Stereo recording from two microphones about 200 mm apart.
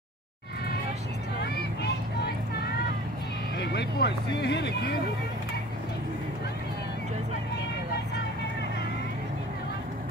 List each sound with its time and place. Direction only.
1.4 s vehicle: 55° left (ahead or behind)
3.5 s vehicle: 55° left (ahead or behind)
4.4 s speech: 55° left (ahead or behind)